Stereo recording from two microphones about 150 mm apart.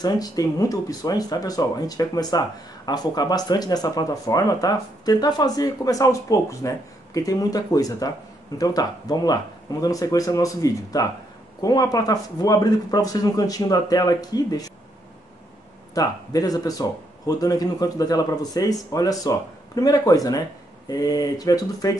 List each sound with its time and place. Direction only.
0.0 s speech: 25° left (ahead or behind)
15.9 s speech: 25° left (ahead or behind)